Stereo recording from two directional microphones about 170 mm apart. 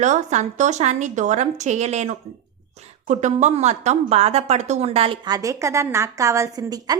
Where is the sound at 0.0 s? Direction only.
45° right (ahead or behind).